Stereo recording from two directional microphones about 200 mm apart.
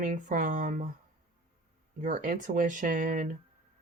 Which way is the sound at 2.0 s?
40° right (ahead or behind).